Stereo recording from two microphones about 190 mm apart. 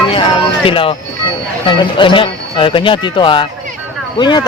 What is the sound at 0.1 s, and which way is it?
Music, 30° left (ahead or behind).